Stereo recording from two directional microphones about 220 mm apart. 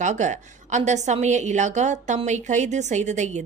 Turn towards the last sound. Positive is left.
turn(degrees=-30)  # may be behind; listen again after turning